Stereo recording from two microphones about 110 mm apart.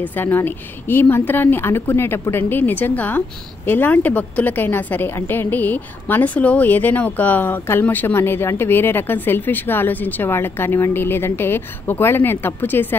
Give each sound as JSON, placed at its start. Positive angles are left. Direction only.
{"t": 0.0, "sound": "a woman's voice", "side_deg": 15}